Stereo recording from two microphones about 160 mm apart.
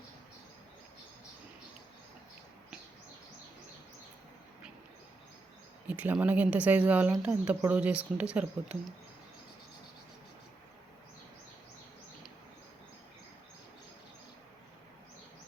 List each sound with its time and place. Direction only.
5.9 s speech: 10° right (ahead or behind)